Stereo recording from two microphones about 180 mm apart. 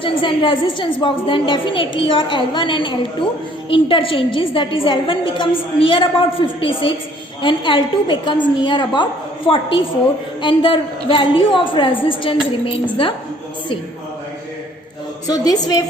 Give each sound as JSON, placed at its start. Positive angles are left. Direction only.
{"t": 0.0, "sound": "a woman's voice", "side_deg": 30}
{"t": 15.3, "sound": "a woman's voice", "side_deg": 20}